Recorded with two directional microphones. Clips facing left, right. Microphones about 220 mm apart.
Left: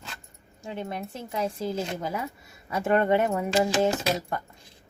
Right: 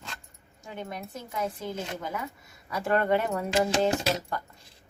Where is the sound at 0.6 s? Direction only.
25° left (ahead or behind).